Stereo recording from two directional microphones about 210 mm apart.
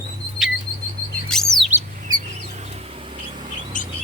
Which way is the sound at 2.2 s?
35° right (ahead or behind).